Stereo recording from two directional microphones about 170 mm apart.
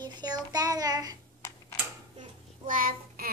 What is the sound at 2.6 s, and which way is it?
Child singing, 55° right (ahead or behind).